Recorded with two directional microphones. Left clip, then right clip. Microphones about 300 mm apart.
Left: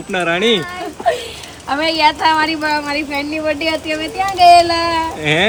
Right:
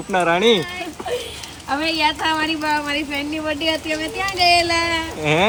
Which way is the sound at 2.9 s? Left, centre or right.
Left.